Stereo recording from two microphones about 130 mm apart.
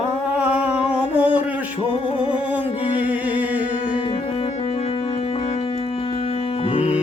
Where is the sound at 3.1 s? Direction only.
10° right (ahead or behind).